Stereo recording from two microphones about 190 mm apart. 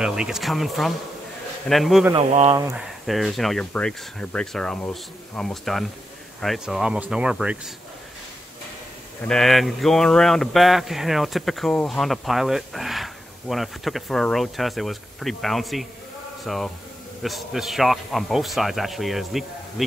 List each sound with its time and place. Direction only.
0.0 s speech: 5° right (ahead or behind)
2.1 s speech: 30° right (ahead or behind)
2.7 s speech: centre (ahead or behind)
9.2 s speech: centre (ahead or behind)